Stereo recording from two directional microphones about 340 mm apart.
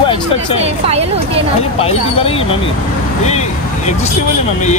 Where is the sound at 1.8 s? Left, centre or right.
Centre.